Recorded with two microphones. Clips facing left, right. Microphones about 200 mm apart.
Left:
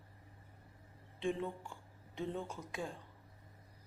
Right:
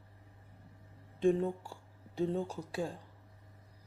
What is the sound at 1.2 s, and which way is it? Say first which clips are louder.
Speech: right 9 dB; 40° right (ahead or behind).